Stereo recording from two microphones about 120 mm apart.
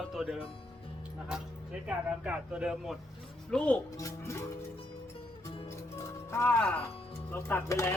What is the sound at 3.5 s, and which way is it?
Speech, 10° left (ahead or behind).